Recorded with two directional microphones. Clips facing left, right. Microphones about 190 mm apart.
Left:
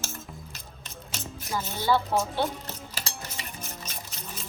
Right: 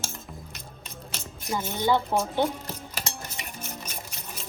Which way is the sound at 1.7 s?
20° right (ahead or behind).